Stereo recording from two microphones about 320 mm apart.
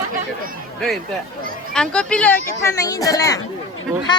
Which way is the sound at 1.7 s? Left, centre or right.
Centre.